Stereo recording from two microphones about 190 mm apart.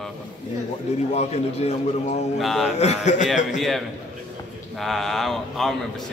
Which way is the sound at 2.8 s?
35° left (ahead or behind).